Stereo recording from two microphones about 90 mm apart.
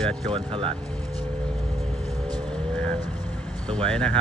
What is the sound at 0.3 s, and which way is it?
Speech, 85° right.